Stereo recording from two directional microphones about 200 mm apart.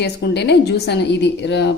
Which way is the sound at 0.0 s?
55° left (ahead or behind).